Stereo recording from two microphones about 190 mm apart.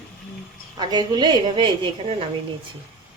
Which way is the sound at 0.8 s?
20° right (ahead or behind).